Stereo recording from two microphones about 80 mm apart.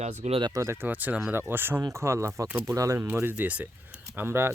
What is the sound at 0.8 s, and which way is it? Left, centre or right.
Speech, right.